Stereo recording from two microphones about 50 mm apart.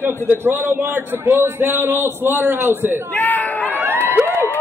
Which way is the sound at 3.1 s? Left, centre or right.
Left.